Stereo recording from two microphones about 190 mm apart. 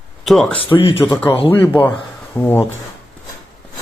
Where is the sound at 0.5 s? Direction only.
30° left (ahead or behind).